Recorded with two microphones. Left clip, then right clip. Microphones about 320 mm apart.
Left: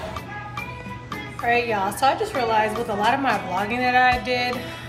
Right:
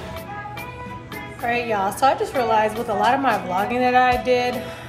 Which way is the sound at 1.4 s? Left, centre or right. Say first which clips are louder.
Even; centre.